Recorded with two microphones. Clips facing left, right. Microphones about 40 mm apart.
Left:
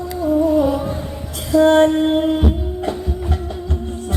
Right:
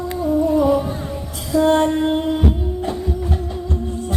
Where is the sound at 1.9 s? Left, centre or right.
Left.